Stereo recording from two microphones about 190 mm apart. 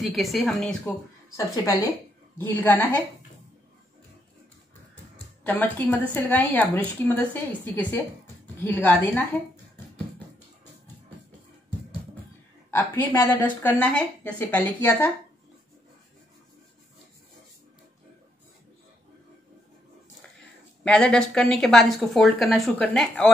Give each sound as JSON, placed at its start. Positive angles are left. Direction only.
{"t": 0.0, "sound": "a woman's voice", "side_deg": 0}
{"t": 2.3, "sound": "speech", "side_deg": 10}
{"t": 5.4, "sound": "speech", "side_deg": 10}
{"t": 12.7, "sound": "speech", "side_deg": 15}
{"t": 20.8, "sound": "a woman's voice", "side_deg": 5}